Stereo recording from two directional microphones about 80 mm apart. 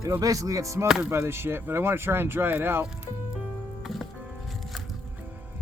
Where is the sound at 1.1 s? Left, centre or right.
Right.